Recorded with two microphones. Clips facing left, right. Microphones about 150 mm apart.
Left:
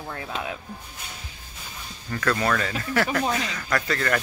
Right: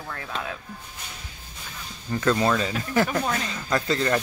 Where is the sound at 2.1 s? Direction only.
20° right (ahead or behind).